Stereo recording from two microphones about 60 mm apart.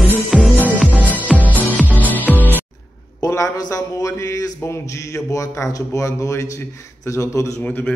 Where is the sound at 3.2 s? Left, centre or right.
Left.